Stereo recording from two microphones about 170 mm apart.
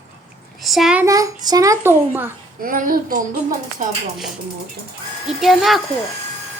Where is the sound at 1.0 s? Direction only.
20° right (ahead or behind).